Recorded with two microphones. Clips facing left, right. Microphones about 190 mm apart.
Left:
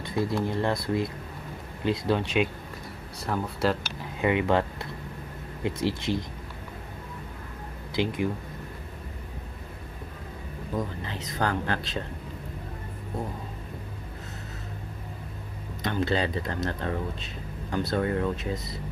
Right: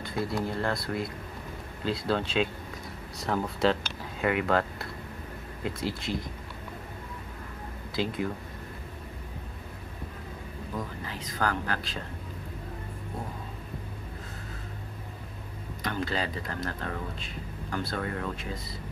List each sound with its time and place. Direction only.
0.0 s speech: 25° left (ahead or behind)
3.3 s speech: centre (ahead or behind)
4.2 s speech: 20° left (ahead or behind)
7.9 s speech: 20° left (ahead or behind)
11.1 s speech: 25° left (ahead or behind)
15.8 s speech: 25° left (ahead or behind)